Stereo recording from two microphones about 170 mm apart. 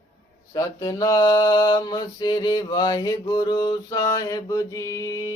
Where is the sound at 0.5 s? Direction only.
20° left (ahead or behind).